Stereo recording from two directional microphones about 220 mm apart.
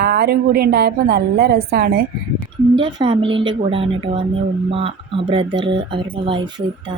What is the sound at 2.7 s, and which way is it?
Speech, 20° right (ahead or behind).